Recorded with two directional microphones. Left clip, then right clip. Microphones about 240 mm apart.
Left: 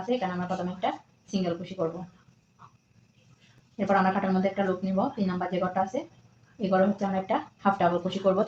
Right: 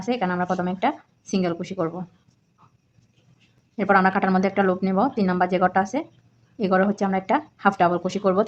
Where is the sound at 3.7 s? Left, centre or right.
Right.